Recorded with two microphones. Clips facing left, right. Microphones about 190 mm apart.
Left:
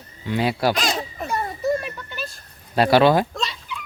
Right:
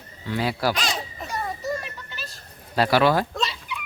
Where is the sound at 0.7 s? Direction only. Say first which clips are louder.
Left 4 dB; 50° left (ahead or behind).